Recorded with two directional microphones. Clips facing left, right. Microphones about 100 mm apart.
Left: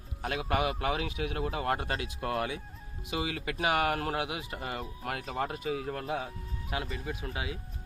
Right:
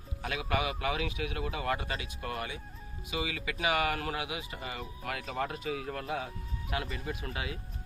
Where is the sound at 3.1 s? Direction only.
45° left (ahead or behind).